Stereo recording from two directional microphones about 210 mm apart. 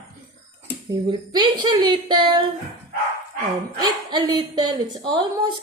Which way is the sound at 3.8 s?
20° right (ahead or behind).